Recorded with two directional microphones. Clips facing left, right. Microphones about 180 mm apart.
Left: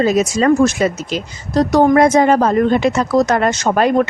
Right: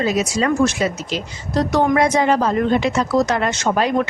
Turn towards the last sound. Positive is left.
turn(degrees=50)  # may be behind; listen again after turning